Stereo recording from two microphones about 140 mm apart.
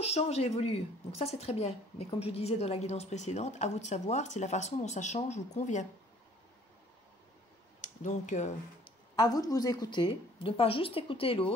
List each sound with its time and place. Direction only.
0.0 s a woman's voice: 45° left (ahead or behind)
7.8 s speech: 60° left (ahead or behind)
9.1 s a woman's voice: 25° left (ahead or behind); by 11.5 s 40° left (ahead or behind)